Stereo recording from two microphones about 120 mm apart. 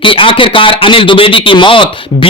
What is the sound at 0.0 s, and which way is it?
Speech, 45° left (ahead or behind).